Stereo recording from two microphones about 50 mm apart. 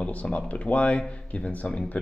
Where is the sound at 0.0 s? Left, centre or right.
Left.